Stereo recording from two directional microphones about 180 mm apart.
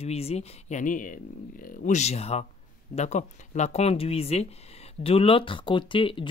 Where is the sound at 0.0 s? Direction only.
35° left (ahead or behind).